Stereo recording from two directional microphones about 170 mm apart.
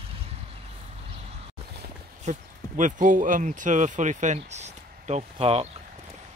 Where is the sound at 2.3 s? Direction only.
45° right (ahead or behind).